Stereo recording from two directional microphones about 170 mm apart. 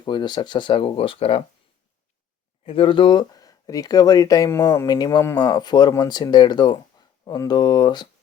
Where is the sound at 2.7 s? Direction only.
30° left (ahead or behind).